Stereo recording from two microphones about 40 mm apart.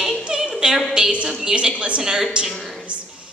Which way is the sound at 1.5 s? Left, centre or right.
Centre.